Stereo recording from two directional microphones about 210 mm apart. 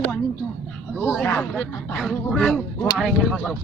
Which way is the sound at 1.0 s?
10° left (ahead or behind).